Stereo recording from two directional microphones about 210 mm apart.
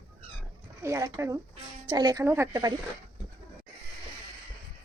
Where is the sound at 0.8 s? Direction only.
15° right (ahead or behind).